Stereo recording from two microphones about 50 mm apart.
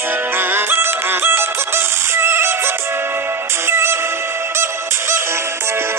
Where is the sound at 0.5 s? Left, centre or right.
Right.